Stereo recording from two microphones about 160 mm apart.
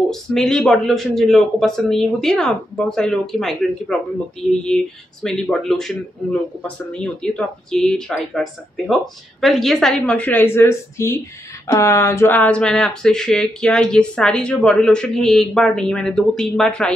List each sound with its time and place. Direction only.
0.1 s speech: 5° left (ahead or behind)